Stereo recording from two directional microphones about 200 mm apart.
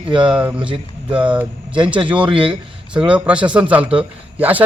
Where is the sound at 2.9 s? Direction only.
5° right (ahead or behind).